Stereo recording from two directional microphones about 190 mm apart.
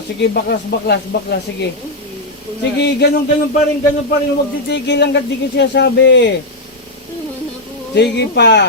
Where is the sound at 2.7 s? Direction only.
60° left (ahead or behind).